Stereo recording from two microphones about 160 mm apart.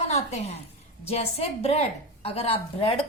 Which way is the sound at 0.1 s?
40° left (ahead or behind).